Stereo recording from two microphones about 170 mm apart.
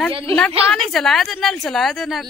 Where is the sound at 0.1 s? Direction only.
35° right (ahead or behind).